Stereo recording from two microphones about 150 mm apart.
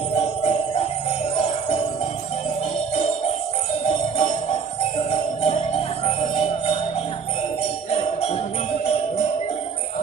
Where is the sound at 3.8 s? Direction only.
45° left (ahead or behind).